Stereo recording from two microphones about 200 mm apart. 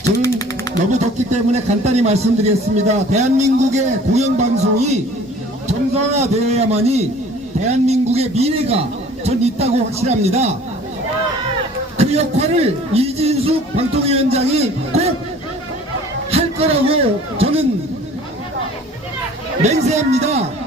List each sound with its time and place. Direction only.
0.2 s a sound: 15° left (ahead or behind)
0.9 s a man's voice: 35° right (ahead or behind)
11.9 s a man's voice: 30° right (ahead or behind)
16.3 s a man's voice: 30° right (ahead or behind)
19.6 s a man's voice: 35° right (ahead or behind)